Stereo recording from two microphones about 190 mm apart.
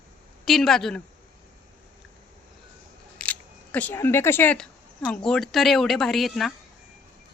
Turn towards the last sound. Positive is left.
turn(degrees=0)  # may be behind; listen again after turning